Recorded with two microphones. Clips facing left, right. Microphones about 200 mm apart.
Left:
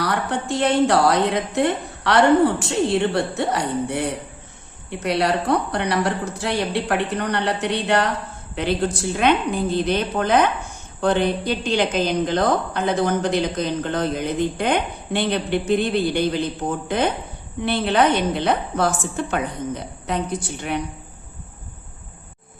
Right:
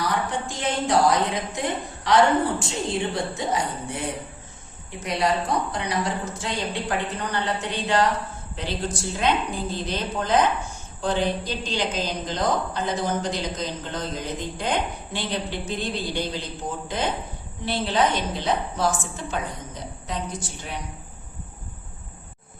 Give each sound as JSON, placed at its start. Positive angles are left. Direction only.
{"t": 0.0, "sound": "a woman's voice", "side_deg": 65}